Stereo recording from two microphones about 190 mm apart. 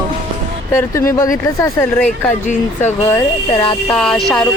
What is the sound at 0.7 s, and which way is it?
Speech, 15° left (ahead or behind).